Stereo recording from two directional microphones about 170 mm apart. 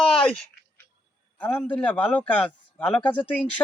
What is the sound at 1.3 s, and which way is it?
A man's voice, 10° left (ahead or behind).